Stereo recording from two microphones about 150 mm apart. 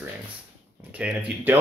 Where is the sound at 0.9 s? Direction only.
10° right (ahead or behind).